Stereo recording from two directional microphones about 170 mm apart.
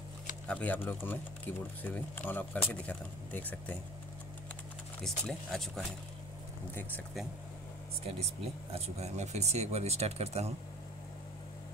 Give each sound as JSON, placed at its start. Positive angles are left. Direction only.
{"t": 0.5, "sound": "speech", "side_deg": 10}
{"t": 5.0, "sound": "speech", "side_deg": 0}
{"t": 8.7, "sound": "speech", "side_deg": -40}